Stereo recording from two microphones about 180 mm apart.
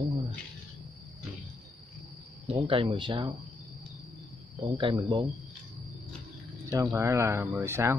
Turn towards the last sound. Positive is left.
turn(degrees=-15)  # may be behind; listen again after turning